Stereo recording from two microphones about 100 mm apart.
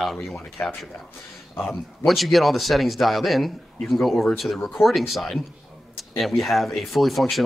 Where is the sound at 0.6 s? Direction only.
20° left (ahead or behind).